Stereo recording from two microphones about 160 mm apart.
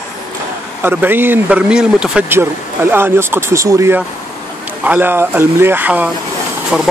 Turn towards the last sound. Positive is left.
turn(degrees=0)  # may be behind; listen again after turning